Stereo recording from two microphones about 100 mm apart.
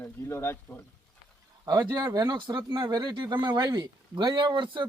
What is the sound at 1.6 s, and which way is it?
Speech, 40° right (ahead or behind).